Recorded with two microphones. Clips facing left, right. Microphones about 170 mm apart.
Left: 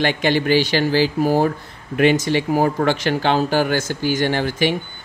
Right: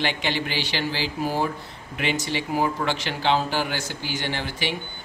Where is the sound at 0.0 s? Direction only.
50° left (ahead or behind).